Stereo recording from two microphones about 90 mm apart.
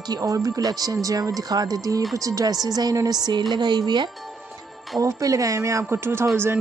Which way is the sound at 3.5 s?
55° right (ahead or behind).